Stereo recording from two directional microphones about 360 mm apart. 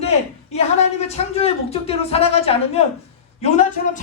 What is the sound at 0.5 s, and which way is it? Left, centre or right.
A man's voice, centre.